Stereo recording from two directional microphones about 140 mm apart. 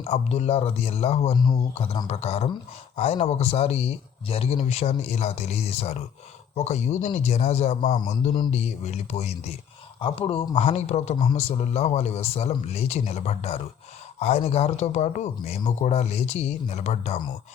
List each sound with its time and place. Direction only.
0.0 s speech: 50° left (ahead or behind)
1.3 s speech: 30° left (ahead or behind)
1.7 s speech: 45° left (ahead or behind)
10.0 s speech: 40° left (ahead or behind)